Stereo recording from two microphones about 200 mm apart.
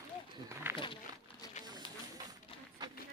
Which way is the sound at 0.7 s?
25° left (ahead or behind).